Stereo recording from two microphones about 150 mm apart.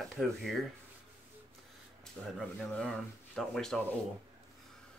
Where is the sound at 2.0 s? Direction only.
5° left (ahead or behind).